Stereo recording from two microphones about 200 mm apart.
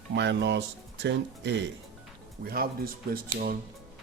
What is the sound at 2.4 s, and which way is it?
Speech, 50° right (ahead or behind).